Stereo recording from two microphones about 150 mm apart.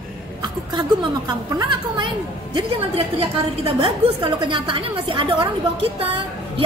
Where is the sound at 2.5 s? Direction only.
40° right (ahead or behind).